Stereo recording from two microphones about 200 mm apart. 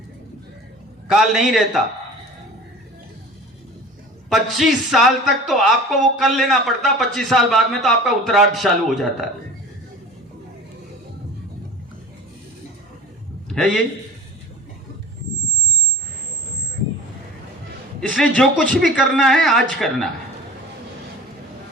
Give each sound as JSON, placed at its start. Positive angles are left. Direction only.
{"t": 1.0, "sound": "speech", "side_deg": 0}
{"t": 4.3, "sound": "speech", "side_deg": 0}
{"t": 13.5, "sound": "a man's voice", "side_deg": 0}
{"t": 18.1, "sound": "speech", "side_deg": 0}